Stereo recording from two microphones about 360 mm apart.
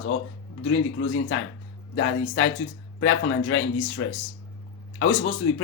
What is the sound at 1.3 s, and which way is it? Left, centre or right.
Speech, left.